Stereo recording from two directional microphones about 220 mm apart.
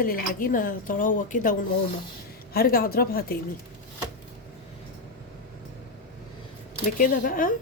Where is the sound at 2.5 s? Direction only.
40° left (ahead or behind).